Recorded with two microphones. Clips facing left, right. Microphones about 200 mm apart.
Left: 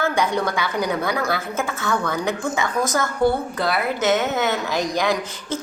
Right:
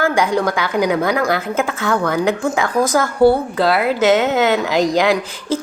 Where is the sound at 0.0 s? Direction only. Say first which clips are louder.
Right 5 dB; 90° right.